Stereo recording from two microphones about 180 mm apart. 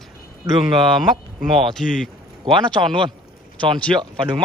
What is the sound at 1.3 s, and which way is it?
Speech, centre (ahead or behind).